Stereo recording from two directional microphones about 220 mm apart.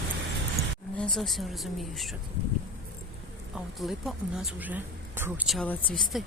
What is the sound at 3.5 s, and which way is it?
Speech, centre (ahead or behind).